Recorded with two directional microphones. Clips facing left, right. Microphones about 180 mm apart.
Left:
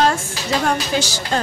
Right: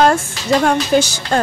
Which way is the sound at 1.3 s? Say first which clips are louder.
Right 5 dB; 50° right (ahead or behind).